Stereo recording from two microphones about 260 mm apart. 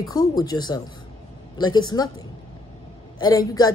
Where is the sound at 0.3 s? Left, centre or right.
Centre.